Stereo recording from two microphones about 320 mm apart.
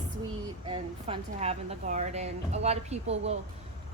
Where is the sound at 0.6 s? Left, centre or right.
Centre.